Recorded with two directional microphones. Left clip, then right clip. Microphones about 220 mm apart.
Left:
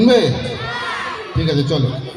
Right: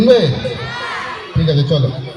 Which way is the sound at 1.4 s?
45° left (ahead or behind).